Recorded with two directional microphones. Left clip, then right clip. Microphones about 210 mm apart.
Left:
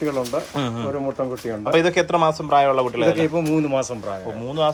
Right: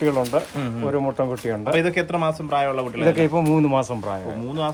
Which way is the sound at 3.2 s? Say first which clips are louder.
Right 1 dB; 40° right (ahead or behind).